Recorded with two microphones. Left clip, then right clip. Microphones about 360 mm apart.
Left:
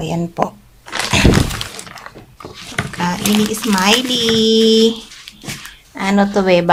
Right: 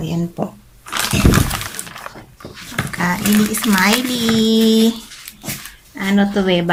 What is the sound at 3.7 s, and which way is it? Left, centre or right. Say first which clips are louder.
Speech: left 2 dB; centre.